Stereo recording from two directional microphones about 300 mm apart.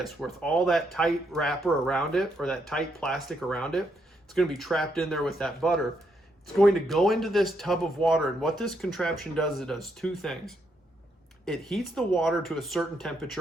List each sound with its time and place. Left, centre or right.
0.0 s speech: centre